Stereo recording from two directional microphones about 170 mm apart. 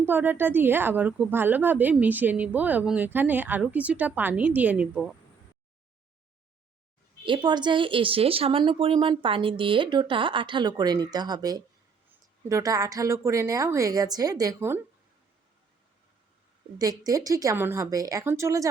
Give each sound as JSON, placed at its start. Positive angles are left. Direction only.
{"t": 0.0, "sound": "a woman's voice", "side_deg": -10}
{"t": 7.3, "sound": "a woman's voice", "side_deg": -25}
{"t": 16.7, "sound": "a woman's voice", "side_deg": -20}